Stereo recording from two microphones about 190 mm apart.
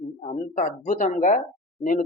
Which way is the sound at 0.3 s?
40° left (ahead or behind).